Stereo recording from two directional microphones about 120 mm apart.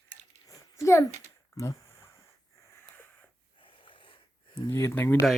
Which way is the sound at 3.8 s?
45° left (ahead or behind).